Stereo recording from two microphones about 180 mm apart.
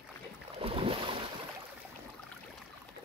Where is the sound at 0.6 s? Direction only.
30° right (ahead or behind).